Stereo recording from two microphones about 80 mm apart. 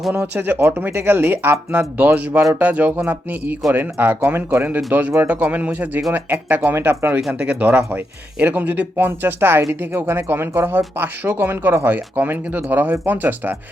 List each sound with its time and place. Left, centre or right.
0.1 s speech: right